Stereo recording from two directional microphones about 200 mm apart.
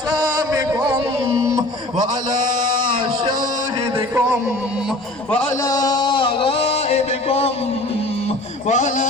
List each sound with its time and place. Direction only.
0.2 s music: 20° right (ahead or behind)
5.6 s music: 20° left (ahead or behind)
8.6 s music: 40° left (ahead or behind)